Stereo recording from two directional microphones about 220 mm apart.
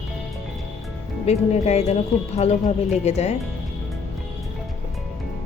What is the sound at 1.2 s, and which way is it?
Speech, 30° left (ahead or behind).